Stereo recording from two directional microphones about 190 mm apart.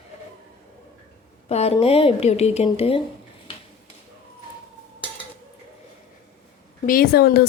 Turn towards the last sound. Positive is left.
turn(degrees=55)  # may be behind; listen again after turning